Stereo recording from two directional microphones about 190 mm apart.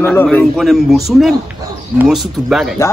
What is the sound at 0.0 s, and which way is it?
A man's voice, 10° left (ahead or behind).